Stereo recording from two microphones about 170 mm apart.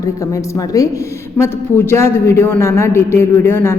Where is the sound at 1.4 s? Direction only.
15° left (ahead or behind).